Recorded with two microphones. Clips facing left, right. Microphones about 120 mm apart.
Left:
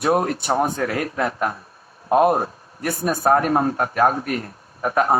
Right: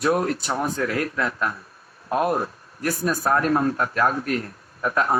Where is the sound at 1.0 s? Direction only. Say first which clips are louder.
Left 2 dB; 50° left (ahead or behind).